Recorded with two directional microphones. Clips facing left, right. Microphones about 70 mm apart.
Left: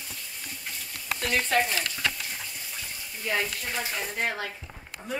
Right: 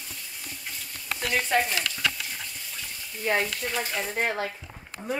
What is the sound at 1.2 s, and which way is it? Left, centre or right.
Stir, centre.